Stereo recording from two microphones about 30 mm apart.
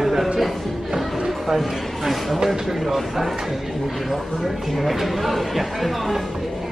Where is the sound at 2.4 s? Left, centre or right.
Centre.